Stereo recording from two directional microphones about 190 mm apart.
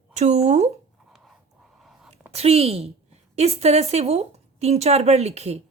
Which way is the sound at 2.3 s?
30° right (ahead or behind).